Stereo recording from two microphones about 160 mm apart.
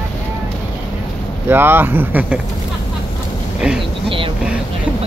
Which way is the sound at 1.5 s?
15° right (ahead or behind).